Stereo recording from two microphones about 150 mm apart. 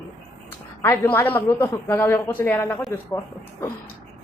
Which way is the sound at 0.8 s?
15° left (ahead or behind).